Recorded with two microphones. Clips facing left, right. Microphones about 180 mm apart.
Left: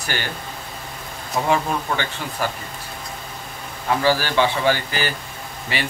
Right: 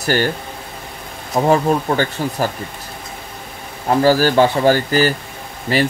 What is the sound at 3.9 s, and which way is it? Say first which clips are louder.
Speech: right 6 dB; 45° right (ahead or behind).